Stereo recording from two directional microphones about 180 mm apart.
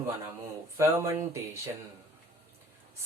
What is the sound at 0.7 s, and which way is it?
Speech, 15° right (ahead or behind).